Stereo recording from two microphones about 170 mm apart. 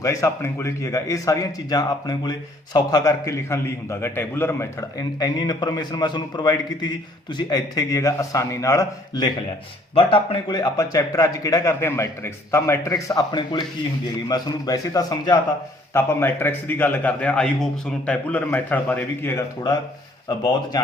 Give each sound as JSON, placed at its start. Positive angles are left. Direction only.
{"t": 0.0, "sound": "a man's voice", "side_deg": 20}